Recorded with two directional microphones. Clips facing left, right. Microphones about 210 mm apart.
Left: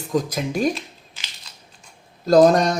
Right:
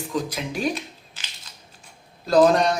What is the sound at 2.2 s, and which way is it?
Speech, 45° left (ahead or behind).